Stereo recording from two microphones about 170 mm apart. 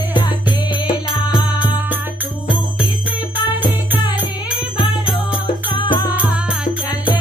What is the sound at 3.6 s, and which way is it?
Music, 10° right (ahead or behind).